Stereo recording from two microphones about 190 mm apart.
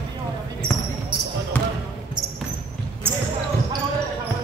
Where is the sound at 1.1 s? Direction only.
25° right (ahead or behind).